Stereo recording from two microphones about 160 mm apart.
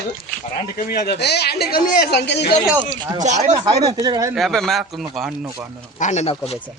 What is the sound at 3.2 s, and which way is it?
Speech, 45° right (ahead or behind).